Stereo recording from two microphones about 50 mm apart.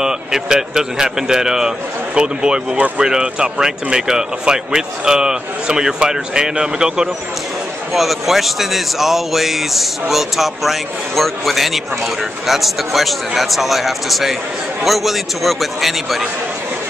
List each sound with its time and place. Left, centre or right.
0.0 s speech: centre
7.9 s speech: centre